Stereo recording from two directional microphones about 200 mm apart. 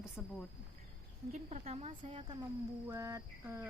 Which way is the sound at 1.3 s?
35° right (ahead or behind).